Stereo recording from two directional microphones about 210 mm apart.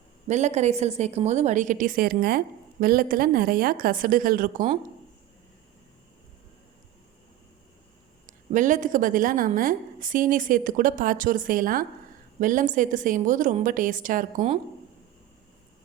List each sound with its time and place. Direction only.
0.3 s a woman's voice: 35° right (ahead or behind)
8.3 s a woman's voice: 35° right (ahead or behind)